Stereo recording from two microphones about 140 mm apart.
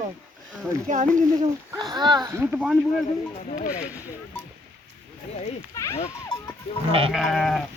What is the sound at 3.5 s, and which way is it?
Speech, 60° left (ahead or behind).